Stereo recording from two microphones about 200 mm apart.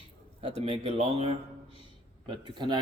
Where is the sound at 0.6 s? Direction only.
30° right (ahead or behind).